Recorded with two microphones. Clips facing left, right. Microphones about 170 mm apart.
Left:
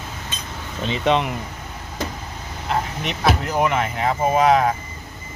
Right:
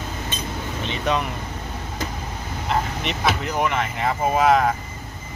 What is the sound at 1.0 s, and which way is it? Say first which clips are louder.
Speech: left 4 dB; 25° left (ahead or behind).